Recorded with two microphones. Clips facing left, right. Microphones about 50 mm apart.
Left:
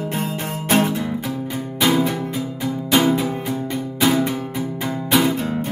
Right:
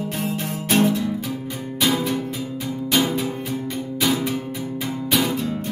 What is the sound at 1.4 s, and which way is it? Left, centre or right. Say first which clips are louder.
Music: left 3 dB; left.